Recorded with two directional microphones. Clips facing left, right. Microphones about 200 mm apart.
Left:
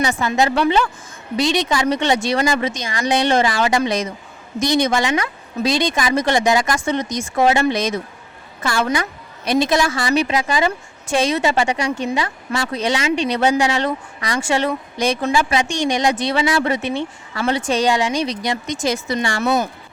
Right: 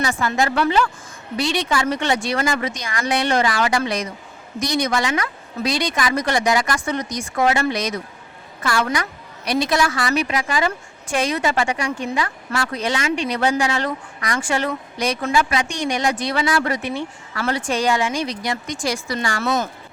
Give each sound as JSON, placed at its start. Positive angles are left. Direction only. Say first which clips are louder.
{"t": 0.0, "sound": "a woman's voice", "louder": "left 3 dB", "side_deg": 20}